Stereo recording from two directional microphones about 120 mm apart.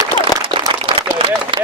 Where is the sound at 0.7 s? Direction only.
40° right (ahead or behind).